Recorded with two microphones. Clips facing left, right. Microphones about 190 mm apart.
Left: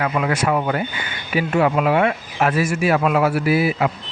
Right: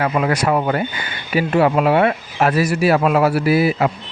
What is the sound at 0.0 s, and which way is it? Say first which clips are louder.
Speech: right 2 dB; 35° right (ahead or behind).